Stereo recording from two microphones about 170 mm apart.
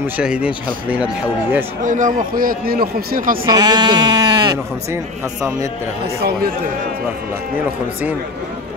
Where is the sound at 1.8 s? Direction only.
50° right (ahead or behind).